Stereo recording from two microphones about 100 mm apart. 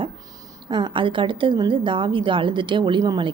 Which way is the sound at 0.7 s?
50° right (ahead or behind).